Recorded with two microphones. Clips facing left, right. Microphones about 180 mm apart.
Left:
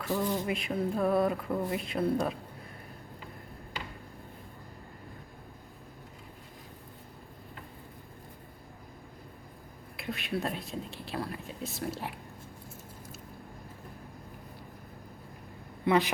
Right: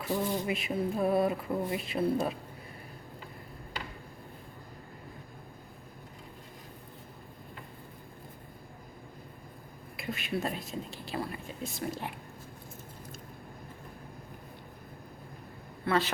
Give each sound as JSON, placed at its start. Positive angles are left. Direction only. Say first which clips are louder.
{"t": 0.1, "sound": "speech", "louder": "left 1 dB", "side_deg": -20}
{"t": 0.4, "sound": "speech", "louder": "even", "side_deg": -5}
{"t": 10.0, "sound": "speech", "louder": "even", "side_deg": 0}
{"t": 15.8, "sound": "speech", "louder": "left 3 dB", "side_deg": 15}